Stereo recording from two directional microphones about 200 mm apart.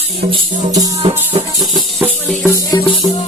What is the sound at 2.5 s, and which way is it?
Music, 20° left (ahead or behind).